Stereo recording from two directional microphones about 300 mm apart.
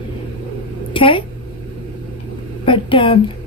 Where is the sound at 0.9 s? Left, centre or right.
Centre.